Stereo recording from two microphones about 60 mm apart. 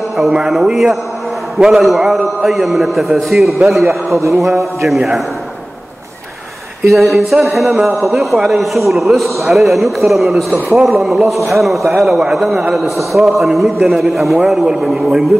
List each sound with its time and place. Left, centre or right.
0.3 s speech: centre
4.2 s a sound: right
4.8 s speech: centre
7.0 s speech: centre
14.4 s a man's voice: centre